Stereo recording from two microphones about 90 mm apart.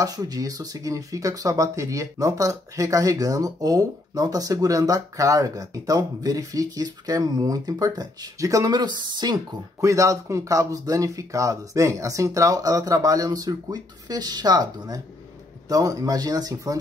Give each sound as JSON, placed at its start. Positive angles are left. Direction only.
{"t": 0.0, "sound": "speech", "side_deg": -45}
{"t": 8.7, "sound": "speech", "side_deg": -55}
{"t": 9.8, "sound": "speech", "side_deg": -35}